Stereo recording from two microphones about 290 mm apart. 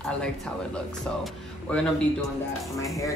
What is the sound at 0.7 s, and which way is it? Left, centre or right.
Speech, centre.